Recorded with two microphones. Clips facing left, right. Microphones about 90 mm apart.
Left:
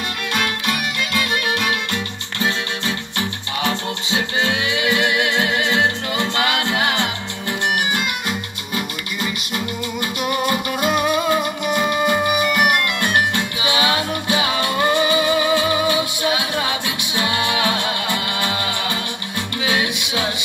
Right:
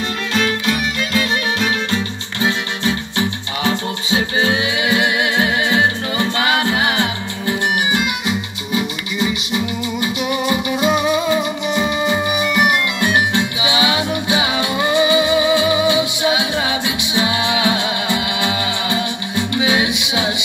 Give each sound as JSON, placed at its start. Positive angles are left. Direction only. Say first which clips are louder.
{"t": 4.7, "sound": "music", "louder": "right 2 dB", "side_deg": 60}
{"t": 8.3, "sound": "music", "louder": "right 4 dB", "side_deg": -5}
{"t": 11.6, "sound": "music", "louder": "even", "side_deg": 50}
{"t": 14.5, "sound": "music", "louder": "right 1 dB", "side_deg": -10}
{"t": 15.9, "sound": "music", "louder": "right 3 dB", "side_deg": 50}
{"t": 17.6, "sound": "music", "louder": "right 2 dB", "side_deg": -10}
{"t": 19.9, "sound": "music", "louder": "right 4 dB", "side_deg": 50}